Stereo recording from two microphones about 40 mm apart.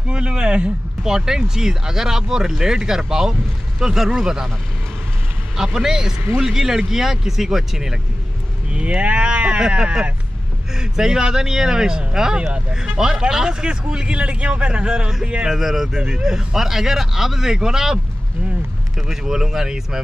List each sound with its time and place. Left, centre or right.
0.0 s speech: right
5.6 s speech: centre
8.6 s speech: right
10.7 s speech: centre
15.5 s speech: centre
15.9 s speech: centre